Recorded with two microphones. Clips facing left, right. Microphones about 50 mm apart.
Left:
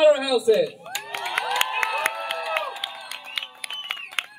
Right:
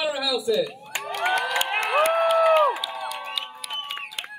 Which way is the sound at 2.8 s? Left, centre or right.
Left.